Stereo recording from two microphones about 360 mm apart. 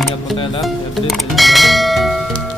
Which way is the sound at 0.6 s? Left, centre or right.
Centre.